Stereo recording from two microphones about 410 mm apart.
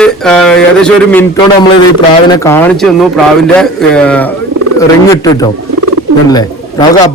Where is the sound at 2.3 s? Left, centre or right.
Centre.